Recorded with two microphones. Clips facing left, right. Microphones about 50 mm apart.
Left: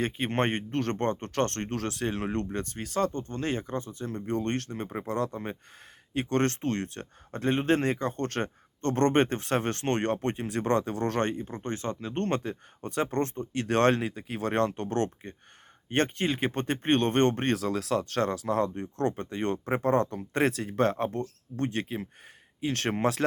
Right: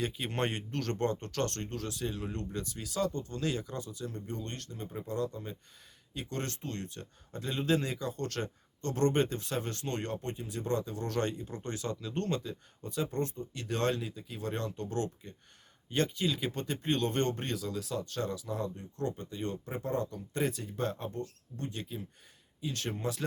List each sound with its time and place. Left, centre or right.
0.0 s speech: left
4.3 s speech: left